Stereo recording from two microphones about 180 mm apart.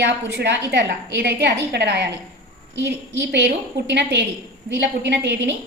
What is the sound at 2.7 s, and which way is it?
A woman's voice, 80° right.